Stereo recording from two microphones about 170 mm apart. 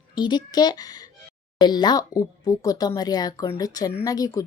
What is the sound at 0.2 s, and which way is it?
Speech, 25° left (ahead or behind).